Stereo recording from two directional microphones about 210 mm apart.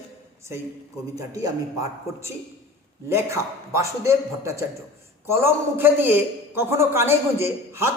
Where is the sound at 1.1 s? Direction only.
15° right (ahead or behind).